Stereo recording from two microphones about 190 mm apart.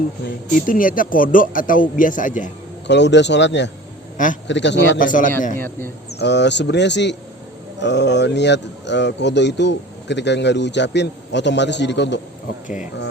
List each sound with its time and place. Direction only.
0.6 s speech: 45° left (ahead or behind)
2.8 s speech: 65° left (ahead or behind)
4.9 s speech: 45° left (ahead or behind)
5.5 s a man's voice: 10° left (ahead or behind)
6.1 s speech: 65° left (ahead or behind)
12.6 s speech: 40° left (ahead or behind)